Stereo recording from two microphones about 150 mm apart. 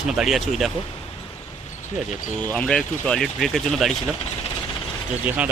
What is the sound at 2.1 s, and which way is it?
Speech, 55° left (ahead or behind).